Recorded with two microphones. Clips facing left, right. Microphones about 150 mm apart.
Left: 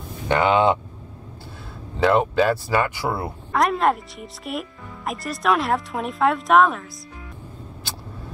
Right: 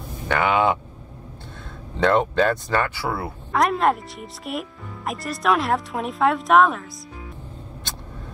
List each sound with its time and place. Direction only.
0.3 s speech: 25° left (ahead or behind)
2.0 s speech: 5° left (ahead or behind)
3.5 s speech: centre (ahead or behind)